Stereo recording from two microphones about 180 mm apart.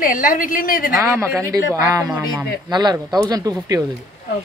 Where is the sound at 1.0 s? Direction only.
15° right (ahead or behind).